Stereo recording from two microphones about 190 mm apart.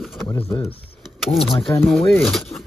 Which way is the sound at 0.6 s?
30° left (ahead or behind).